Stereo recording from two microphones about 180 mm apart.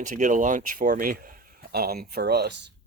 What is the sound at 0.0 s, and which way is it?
Speech, 45° right (ahead or behind).